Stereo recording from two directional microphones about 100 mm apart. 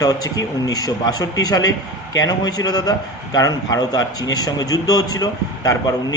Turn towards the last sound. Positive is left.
turn(degrees=40)  # may be behind; listen again after turning